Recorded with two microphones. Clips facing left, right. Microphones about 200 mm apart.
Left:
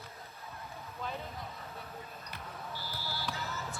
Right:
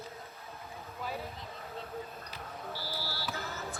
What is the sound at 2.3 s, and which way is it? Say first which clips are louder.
Basketball bounce: left 1 dB; 50° left (ahead or behind).